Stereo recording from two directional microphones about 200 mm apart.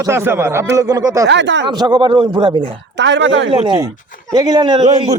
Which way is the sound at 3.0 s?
65° right (ahead or behind).